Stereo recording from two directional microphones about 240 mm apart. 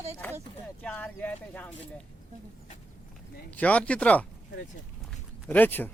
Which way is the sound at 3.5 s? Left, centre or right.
Centre.